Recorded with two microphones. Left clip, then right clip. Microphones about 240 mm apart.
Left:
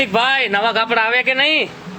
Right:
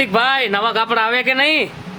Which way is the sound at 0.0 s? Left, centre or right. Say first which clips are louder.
Even; centre.